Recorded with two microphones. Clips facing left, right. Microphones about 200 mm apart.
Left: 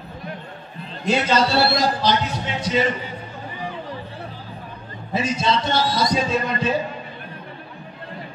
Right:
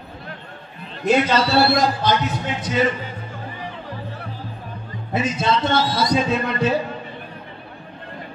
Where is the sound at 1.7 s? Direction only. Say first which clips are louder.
Right 1 dB; 50° right (ahead or behind).